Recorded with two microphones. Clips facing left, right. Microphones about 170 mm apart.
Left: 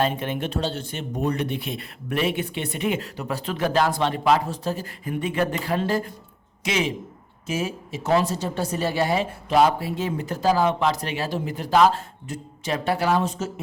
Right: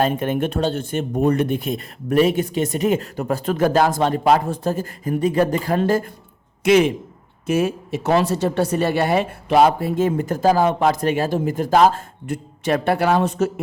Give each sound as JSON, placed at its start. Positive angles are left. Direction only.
{"t": 0.0, "sound": "a woman's voice", "side_deg": -45}